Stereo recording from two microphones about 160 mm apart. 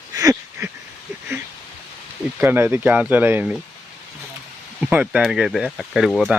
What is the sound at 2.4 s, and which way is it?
Speech, 15° right (ahead or behind).